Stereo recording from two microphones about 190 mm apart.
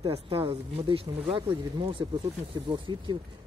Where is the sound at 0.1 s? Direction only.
30° right (ahead or behind).